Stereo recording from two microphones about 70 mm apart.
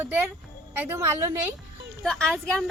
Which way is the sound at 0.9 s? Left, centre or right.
Right.